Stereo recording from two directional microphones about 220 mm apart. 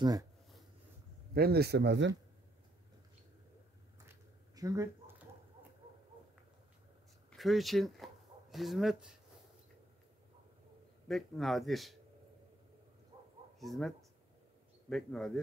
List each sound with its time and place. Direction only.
0.0 s speech: 15° right (ahead or behind)
1.3 s speech: 45° right (ahead or behind)
4.1 s a sound: 15° right (ahead or behind)
7.2 s speech: centre (ahead or behind)
11.1 s a man's voice: centre (ahead or behind)
13.6 s a man's voice: centre (ahead or behind)